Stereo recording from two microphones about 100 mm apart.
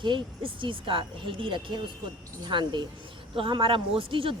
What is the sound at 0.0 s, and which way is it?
A woman's voice, 55° right (ahead or behind).